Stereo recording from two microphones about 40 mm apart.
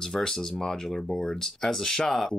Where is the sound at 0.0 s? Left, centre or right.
Centre.